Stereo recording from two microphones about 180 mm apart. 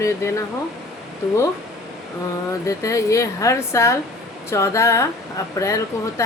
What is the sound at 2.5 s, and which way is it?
A woman's voice, 15° left (ahead or behind).